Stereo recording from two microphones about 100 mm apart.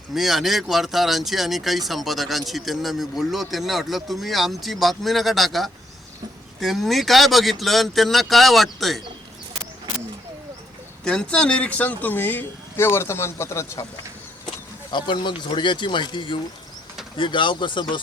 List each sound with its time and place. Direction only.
0.1 s speech: centre (ahead or behind)
11.0 s speech: 10° left (ahead or behind); by 13.8 s 30° left (ahead or behind)
14.9 s speech: 50° left (ahead or behind)